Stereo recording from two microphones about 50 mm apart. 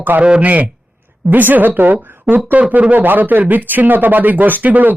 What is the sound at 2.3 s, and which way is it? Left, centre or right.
Speech, centre.